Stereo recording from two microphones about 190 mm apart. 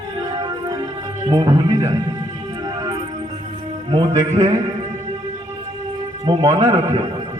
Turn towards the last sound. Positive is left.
turn(degrees=-35)  # may be behind; listen again after turning